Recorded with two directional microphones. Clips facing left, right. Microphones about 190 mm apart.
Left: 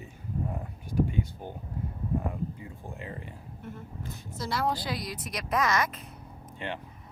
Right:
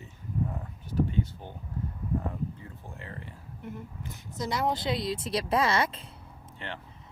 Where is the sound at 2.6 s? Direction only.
15° left (ahead or behind).